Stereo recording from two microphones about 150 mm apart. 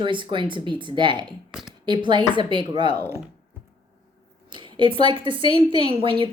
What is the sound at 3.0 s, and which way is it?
Speech, 15° right (ahead or behind).